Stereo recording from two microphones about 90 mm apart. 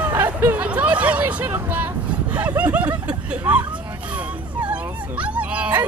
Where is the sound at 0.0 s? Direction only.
20° right (ahead or behind).